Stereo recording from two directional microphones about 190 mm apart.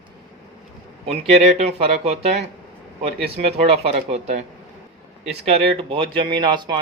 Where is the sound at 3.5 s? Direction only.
30° right (ahead or behind).